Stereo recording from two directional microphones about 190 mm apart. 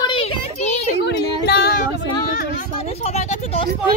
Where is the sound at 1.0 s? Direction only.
60° left (ahead or behind).